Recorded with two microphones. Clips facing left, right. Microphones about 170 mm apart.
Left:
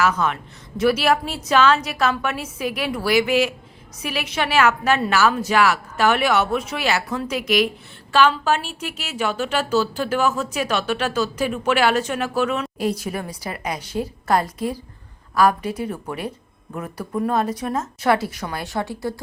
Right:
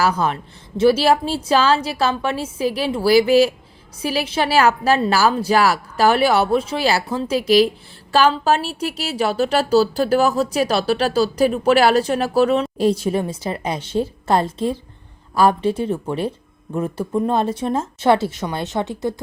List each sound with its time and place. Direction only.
0.0 s a woman's voice: 35° right (ahead or behind)